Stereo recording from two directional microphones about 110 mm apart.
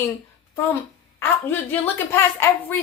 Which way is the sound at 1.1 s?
20° left (ahead or behind).